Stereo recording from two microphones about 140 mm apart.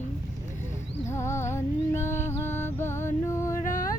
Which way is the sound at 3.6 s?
75° left (ahead or behind).